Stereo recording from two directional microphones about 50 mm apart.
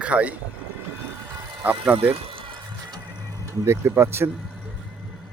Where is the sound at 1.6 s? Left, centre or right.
Right.